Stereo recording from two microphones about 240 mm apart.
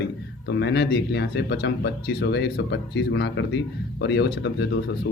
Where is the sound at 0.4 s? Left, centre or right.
Left.